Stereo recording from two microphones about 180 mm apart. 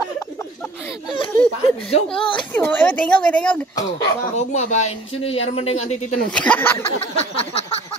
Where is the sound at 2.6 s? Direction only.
10° left (ahead or behind).